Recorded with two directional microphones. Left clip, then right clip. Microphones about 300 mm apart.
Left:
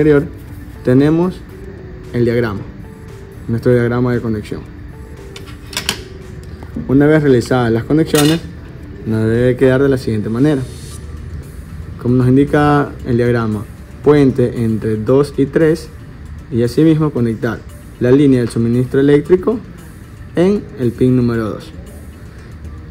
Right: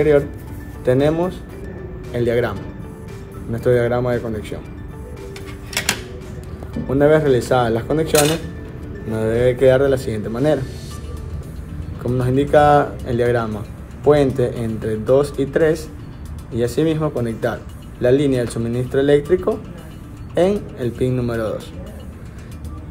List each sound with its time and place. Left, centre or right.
0.8 s speech: left
3.6 s speech: left
5.3 s tick: centre
6.9 s speech: left
12.0 s speech: left